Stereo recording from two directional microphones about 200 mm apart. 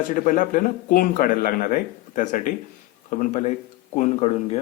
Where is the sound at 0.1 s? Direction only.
40° left (ahead or behind).